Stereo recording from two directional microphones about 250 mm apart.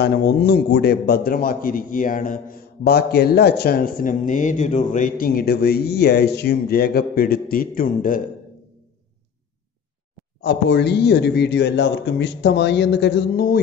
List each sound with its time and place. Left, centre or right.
0.0 s a man's voice: left
10.4 s a man's voice: left